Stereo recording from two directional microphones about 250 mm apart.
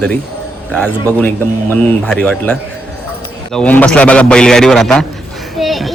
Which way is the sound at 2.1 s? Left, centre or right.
Centre.